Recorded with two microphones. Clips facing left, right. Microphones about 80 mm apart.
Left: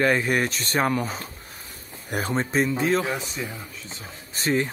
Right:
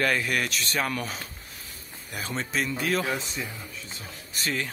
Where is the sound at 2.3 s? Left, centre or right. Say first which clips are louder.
Left 6 dB; left.